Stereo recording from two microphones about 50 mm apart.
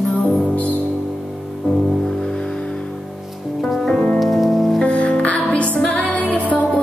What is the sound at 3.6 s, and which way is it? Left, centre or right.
Music, centre.